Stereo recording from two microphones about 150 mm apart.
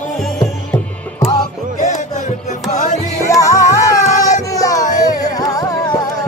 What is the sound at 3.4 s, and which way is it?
Music, 20° left (ahead or behind).